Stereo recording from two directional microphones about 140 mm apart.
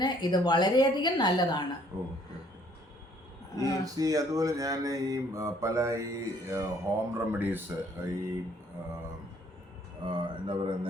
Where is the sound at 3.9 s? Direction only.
25° right (ahead or behind).